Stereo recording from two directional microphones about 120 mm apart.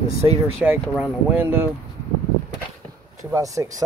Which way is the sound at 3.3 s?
25° right (ahead or behind).